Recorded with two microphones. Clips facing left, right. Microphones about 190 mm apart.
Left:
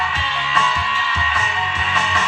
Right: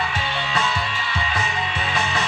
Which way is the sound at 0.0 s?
35° right (ahead or behind).